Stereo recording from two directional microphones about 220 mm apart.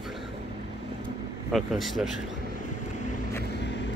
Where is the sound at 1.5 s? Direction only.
Centre (ahead or behind).